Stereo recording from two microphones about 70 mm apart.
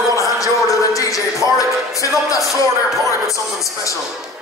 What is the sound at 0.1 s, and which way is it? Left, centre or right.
Music, left.